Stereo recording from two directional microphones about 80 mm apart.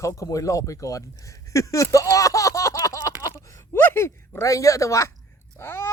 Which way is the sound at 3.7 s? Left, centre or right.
Left.